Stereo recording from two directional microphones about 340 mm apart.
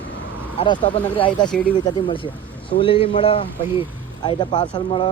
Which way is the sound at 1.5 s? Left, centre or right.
Centre.